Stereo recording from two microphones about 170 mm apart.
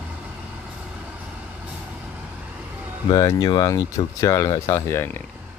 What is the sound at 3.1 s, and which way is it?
Speech, 20° left (ahead or behind).